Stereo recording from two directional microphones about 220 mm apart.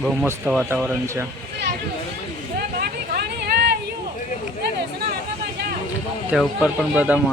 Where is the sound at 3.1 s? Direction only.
45° right (ahead or behind).